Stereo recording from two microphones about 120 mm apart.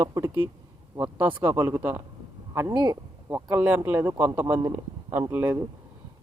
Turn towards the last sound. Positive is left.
turn(degrees=-15)  # may be behind; listen again after turning